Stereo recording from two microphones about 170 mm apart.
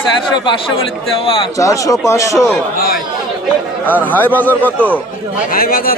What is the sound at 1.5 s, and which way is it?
Speech, 20° left (ahead or behind).